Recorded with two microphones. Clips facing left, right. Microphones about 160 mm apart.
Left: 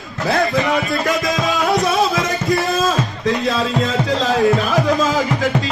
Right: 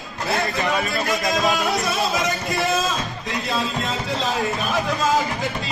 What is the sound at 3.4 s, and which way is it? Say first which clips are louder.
Music: left 6 dB; 90° left.